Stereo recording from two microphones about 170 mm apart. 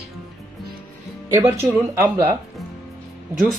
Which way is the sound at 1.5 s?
10° right (ahead or behind).